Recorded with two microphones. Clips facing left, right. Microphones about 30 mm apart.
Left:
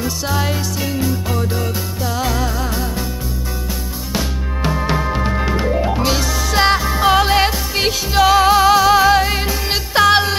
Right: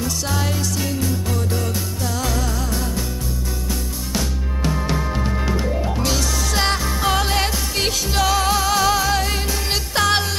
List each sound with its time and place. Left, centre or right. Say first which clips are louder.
0.0 s music: left 3 dB; centre
4.1 s music: left 3 dB; left
8.7 s music: left 7 dB; centre